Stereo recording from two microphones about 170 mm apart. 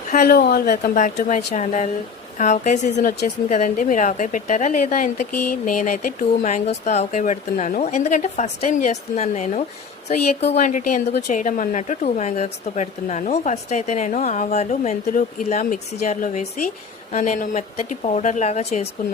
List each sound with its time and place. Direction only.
0.1 s speech: 60° left (ahead or behind); by 18.9 s 40° left (ahead or behind)